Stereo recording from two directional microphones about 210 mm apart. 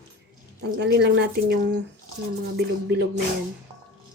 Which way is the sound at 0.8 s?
50° right (ahead or behind).